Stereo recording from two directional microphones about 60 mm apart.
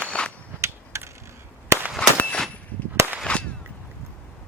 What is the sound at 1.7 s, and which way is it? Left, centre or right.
Firecracker, right.